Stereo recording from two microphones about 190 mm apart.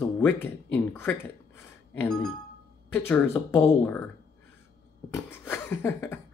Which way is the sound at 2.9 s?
10° left (ahead or behind).